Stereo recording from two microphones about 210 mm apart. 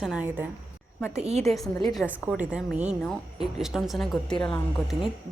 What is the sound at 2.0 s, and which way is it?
Speech, 5° right (ahead or behind).